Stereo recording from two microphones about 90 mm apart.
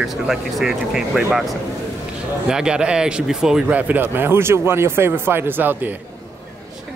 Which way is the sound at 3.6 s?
15° right (ahead or behind).